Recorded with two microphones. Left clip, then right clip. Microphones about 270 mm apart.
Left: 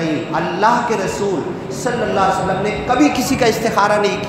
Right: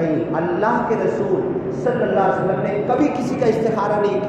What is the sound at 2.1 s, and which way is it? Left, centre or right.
A woman's voice, left.